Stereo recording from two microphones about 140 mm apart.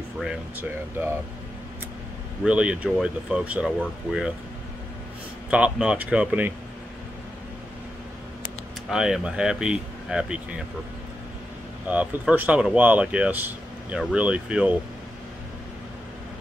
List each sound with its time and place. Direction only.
0.6 s speech: 15° right (ahead or behind)
2.4 s speech: 10° right (ahead or behind)
5.5 s speech: 10° right (ahead or behind)
8.8 s speech: 5° right (ahead or behind)
11.9 s speech: 10° right (ahead or behind)